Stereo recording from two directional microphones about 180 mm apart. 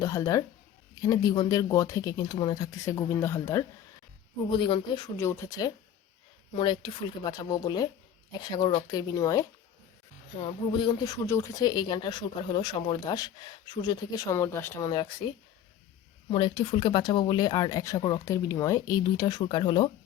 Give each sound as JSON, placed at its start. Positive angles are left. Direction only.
{"t": 0.0, "sound": "speech", "side_deg": 15}
{"t": 4.5, "sound": "speech", "side_deg": 25}
{"t": 5.1, "sound": "speech", "side_deg": 15}
{"t": 16.3, "sound": "speech", "side_deg": 30}